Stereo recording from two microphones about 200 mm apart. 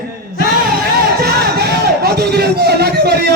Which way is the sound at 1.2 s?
50° right (ahead or behind).